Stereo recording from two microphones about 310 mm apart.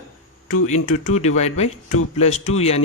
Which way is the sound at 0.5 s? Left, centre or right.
Left.